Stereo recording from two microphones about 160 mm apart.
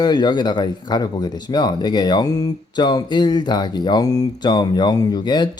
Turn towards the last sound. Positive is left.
turn(degrees=25)  # may be behind; listen again after turning